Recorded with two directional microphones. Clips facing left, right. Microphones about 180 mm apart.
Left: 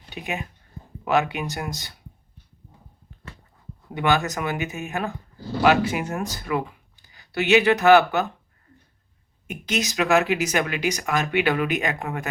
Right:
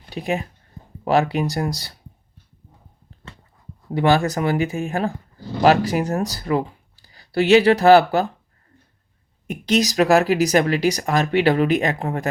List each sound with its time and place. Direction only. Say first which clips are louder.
0.1 s speech: right 7 dB; 35° right (ahead or behind)
3.8 s speech: right 5 dB; 35° right (ahead or behind)
9.5 s speech: right 7 dB; 35° right (ahead or behind)